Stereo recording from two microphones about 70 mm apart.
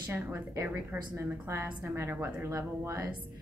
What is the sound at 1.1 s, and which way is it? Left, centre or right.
Speech, right.